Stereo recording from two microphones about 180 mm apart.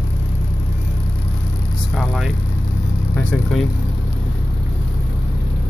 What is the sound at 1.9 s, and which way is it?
Vehicle, centre (ahead or behind).